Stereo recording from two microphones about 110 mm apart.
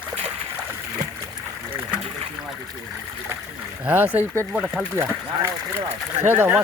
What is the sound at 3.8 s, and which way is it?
Speech, 15° right (ahead or behind).